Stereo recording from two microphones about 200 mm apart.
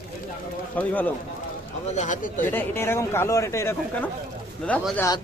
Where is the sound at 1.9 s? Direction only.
40° left (ahead or behind).